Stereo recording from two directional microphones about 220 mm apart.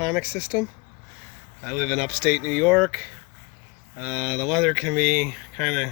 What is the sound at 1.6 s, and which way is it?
Speech, 5° right (ahead or behind).